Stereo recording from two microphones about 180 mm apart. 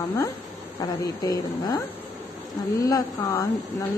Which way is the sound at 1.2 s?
20° left (ahead or behind).